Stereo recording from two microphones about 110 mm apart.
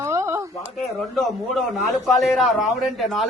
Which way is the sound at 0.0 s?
25° right (ahead or behind).